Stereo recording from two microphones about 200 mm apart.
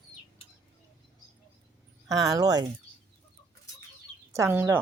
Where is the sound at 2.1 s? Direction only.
15° right (ahead or behind).